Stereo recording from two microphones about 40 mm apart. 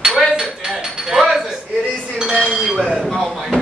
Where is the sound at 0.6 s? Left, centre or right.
Right.